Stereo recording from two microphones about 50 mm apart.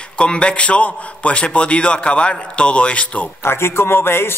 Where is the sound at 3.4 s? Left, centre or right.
Left.